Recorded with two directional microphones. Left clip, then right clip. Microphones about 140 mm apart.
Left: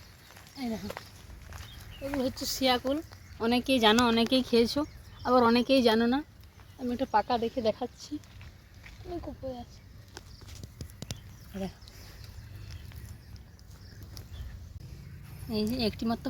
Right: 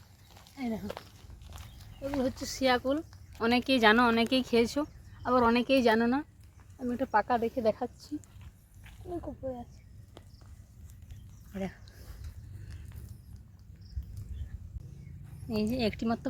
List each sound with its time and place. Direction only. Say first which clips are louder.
0.6 s speech: even; centre (ahead or behind)
1.5 s a sound: left 5 dB; 5° right (ahead or behind)
2.2 s speech: left 1 dB; 30° left (ahead or behind)
4.3 s speech: left 2 dB; 50° left (ahead or behind)
6.7 s speech: left 1 dB; 30° left (ahead or behind)
9.0 s speech: right 1 dB; centre (ahead or behind)
15.4 s speech: even; 5° right (ahead or behind)